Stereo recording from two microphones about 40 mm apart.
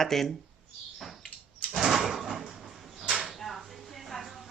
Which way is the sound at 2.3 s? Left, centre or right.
Centre.